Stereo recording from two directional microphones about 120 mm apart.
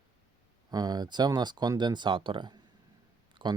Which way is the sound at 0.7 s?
35° right (ahead or behind).